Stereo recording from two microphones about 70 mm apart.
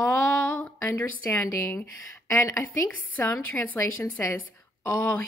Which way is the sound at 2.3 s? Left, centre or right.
Left.